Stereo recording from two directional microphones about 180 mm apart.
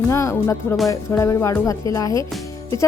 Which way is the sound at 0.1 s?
15° left (ahead or behind).